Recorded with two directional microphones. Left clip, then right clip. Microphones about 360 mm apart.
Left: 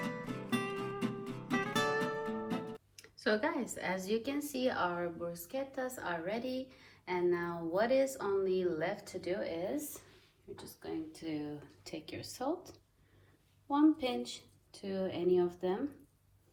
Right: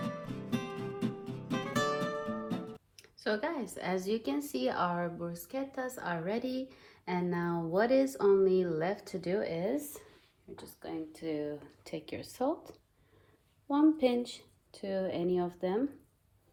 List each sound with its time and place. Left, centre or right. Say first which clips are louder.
0.0 s music: even; centre
5.3 s a woman's voice: right 1 dB; centre